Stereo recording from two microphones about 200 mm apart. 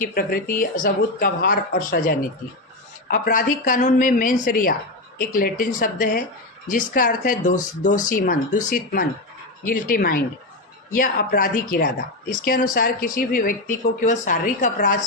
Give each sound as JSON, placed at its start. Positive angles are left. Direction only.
{"t": 0.0, "sound": "speech", "side_deg": 50}